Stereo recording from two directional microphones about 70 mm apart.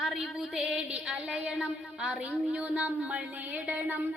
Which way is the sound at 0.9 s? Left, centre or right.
Centre.